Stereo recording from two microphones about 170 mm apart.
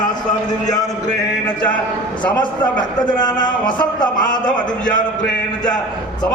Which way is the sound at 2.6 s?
25° left (ahead or behind).